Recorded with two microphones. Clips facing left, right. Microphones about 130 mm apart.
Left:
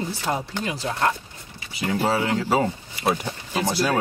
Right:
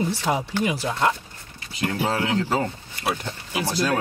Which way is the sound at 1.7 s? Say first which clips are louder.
Left 2 dB; 10° left (ahead or behind).